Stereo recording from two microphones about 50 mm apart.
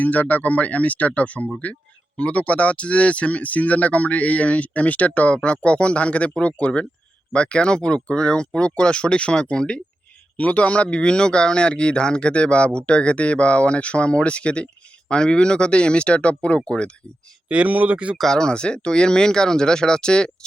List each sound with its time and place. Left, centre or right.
0.0 s speech: left
10.3 s speech: left
17.5 s speech: right
18.2 s speech: centre